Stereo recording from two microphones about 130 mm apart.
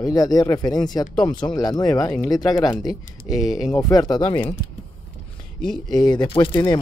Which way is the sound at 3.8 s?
30° left (ahead or behind).